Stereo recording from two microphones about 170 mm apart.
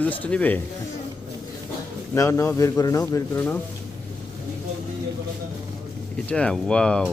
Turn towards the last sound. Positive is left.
turn(degrees=5)  # may be behind; listen again after turning